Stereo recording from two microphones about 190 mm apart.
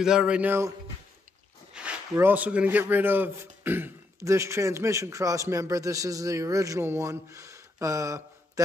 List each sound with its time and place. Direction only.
0.0 s speech: 5° right (ahead or behind)
1.7 s speech: 5° right (ahead or behind)